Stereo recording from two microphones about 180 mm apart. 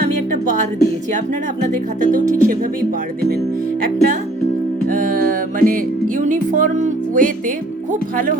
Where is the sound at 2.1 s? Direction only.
50° right (ahead or behind).